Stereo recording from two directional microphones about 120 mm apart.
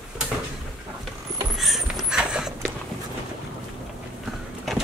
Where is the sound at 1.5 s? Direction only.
Centre (ahead or behind).